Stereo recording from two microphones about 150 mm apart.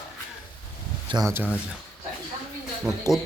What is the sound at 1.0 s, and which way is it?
Speech, 30° right (ahead or behind).